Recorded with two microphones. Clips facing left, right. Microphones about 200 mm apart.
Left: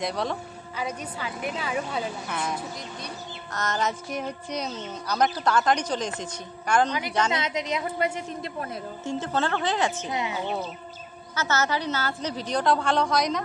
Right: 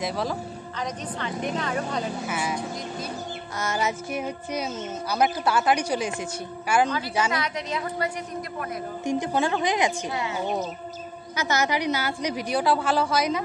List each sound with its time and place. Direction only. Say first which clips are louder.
0.0 s speech: right 1 dB; centre (ahead or behind)
2.2 s a woman's voice: right 2 dB; 5° right (ahead or behind)
3.5 s a woman's voice: even; 10° right (ahead or behind)
7.3 s a woman's voice: left 1 dB; 20° left (ahead or behind)
9.0 s a woman's voice: right 3 dB; 15° right (ahead or behind)
10.0 s a woman's voice: even; 20° left (ahead or behind)
11.3 s a woman's voice: right 1 dB; 15° right (ahead or behind)